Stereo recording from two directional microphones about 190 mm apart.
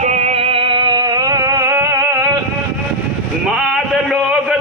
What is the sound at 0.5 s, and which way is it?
Music, 25° right (ahead or behind).